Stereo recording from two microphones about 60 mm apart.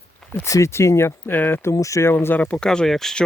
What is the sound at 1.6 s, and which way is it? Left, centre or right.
Speech, left.